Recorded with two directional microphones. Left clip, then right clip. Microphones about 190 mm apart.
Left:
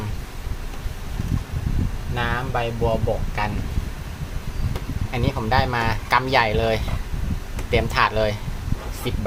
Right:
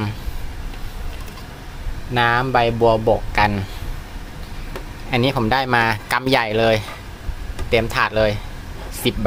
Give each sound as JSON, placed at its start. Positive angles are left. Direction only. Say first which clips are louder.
{"t": 2.1, "sound": "speech", "louder": "right 9 dB", "side_deg": -60}
{"t": 5.1, "sound": "speech", "louder": "right 4 dB", "side_deg": -40}
{"t": 9.0, "sound": "speech", "louder": "right 9 dB", "side_deg": -40}